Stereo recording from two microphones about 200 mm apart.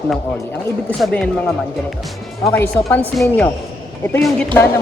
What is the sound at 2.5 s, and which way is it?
Speech, 10° left (ahead or behind).